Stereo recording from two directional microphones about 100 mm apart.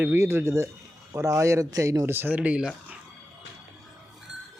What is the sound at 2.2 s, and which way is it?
Speech, 15° right (ahead or behind).